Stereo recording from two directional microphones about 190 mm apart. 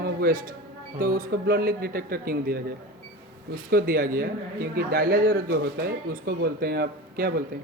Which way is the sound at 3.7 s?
50° right (ahead or behind).